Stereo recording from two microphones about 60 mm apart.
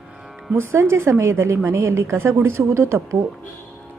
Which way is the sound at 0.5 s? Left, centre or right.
Right.